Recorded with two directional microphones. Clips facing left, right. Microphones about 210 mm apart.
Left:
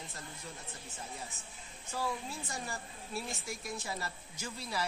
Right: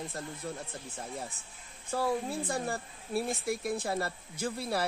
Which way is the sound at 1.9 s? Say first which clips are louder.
Right 7 dB; 55° right (ahead or behind).